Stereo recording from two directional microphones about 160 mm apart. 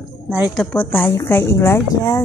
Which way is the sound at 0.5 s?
10° left (ahead or behind).